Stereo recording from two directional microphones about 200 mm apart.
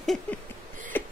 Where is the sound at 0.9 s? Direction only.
10° left (ahead or behind).